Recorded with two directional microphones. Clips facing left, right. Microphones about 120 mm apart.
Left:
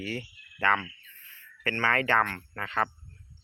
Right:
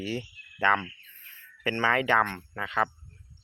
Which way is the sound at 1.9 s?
15° right (ahead or behind).